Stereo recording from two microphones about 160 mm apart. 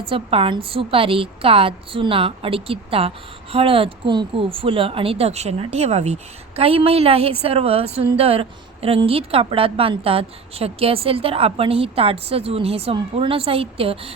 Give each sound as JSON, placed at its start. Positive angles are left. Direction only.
{"t": 0.1, "sound": "a woman's voice", "side_deg": -35}